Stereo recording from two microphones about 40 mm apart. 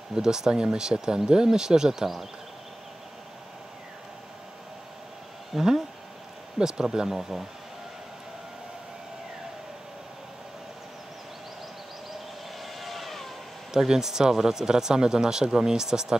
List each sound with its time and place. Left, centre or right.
0.1 s speech: centre
5.5 s speech: centre
12.5 s vehicle: centre
13.7 s speech: centre